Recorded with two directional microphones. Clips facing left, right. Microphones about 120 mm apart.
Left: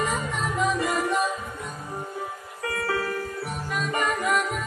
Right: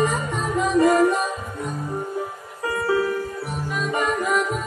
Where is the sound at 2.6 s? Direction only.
25° right (ahead or behind).